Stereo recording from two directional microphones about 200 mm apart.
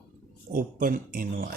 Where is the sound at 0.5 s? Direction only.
45° right (ahead or behind).